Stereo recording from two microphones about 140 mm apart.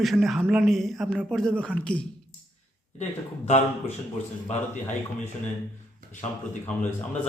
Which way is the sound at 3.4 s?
55° left (ahead or behind).